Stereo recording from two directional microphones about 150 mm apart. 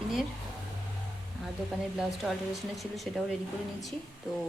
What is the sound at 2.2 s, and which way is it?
Speech, centre (ahead or behind).